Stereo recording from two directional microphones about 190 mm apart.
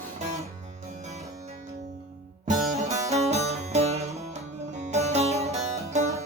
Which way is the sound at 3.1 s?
35° right (ahead or behind).